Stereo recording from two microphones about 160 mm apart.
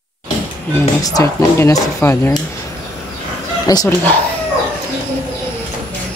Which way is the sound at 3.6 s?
25° left (ahead or behind).